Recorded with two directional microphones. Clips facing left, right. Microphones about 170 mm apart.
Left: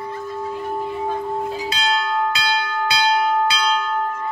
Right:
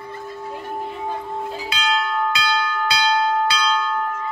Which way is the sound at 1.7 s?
35° left (ahead or behind).